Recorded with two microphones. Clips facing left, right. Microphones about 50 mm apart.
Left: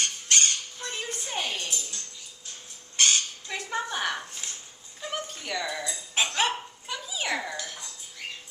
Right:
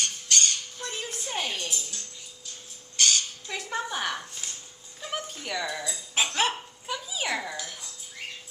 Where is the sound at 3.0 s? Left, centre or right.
Left.